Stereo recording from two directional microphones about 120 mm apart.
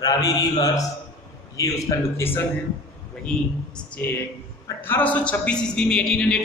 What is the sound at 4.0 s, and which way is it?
A man's voice, 15° left (ahead or behind).